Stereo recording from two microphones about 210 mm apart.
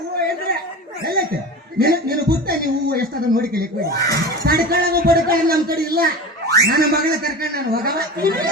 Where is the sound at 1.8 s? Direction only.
45° right (ahead or behind).